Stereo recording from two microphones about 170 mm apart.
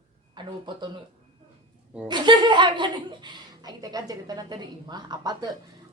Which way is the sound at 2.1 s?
25° right (ahead or behind).